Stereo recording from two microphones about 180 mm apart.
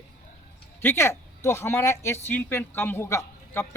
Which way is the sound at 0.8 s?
15° left (ahead or behind).